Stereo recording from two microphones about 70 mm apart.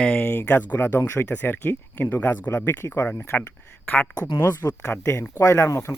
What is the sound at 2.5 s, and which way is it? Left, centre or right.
Speech, left.